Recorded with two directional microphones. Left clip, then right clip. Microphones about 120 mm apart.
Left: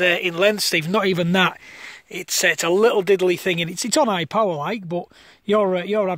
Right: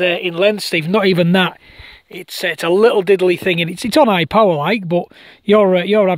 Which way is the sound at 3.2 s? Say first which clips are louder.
Right 5 dB; 65° right (ahead or behind).